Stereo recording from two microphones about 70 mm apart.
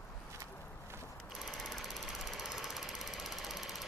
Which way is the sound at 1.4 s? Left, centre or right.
Centre.